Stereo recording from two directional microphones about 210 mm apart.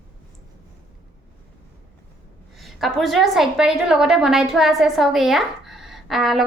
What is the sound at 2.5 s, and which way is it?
A woman's voice, centre (ahead or behind).